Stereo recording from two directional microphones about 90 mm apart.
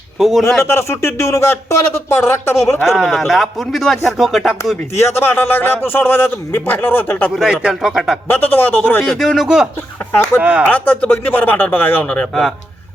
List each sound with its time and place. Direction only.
0.2 s speech: centre (ahead or behind)
0.6 s a man's voice: 30° left (ahead or behind)
2.8 s speech: centre (ahead or behind)
4.9 s a man's voice: 30° left (ahead or behind)
7.3 s speech: 5° right (ahead or behind)
8.3 s a man's voice: 20° left (ahead or behind)
9.1 s speech: 5° right (ahead or behind)
10.7 s a man's voice: 20° left (ahead or behind)